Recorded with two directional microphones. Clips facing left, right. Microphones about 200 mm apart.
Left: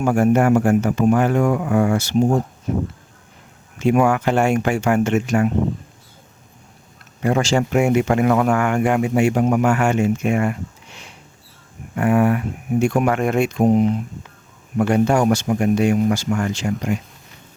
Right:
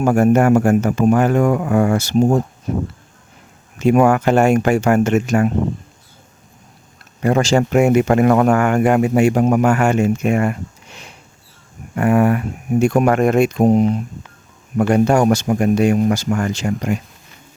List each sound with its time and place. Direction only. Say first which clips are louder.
0.0 s speech: right 3 dB; 45° right (ahead or behind)
3.8 s speech: right 3 dB; 45° right (ahead or behind)
7.2 s speech: right 3 dB; 45° right (ahead or behind)